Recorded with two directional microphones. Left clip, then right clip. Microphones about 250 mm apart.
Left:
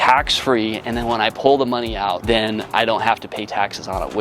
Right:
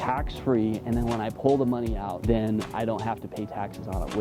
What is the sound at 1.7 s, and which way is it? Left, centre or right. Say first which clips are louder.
Speech: left 10 dB; centre.